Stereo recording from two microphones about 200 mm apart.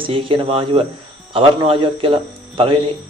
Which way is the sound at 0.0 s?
25° right (ahead or behind).